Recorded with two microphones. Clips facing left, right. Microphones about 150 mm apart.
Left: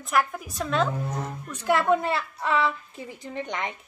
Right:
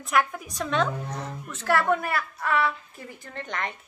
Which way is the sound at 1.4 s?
15° left (ahead or behind).